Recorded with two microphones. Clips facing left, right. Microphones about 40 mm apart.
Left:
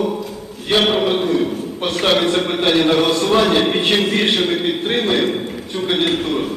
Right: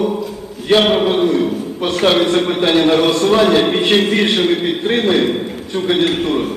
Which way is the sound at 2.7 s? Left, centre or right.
Right.